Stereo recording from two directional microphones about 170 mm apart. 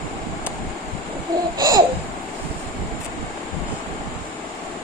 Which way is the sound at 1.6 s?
20° right (ahead or behind).